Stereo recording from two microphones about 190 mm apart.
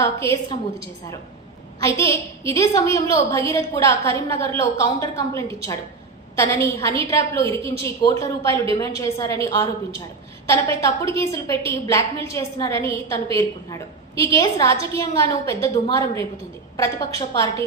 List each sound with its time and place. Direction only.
0.0 s a woman's voice: 15° left (ahead or behind)
1.8 s a woman's voice: 15° left (ahead or behind)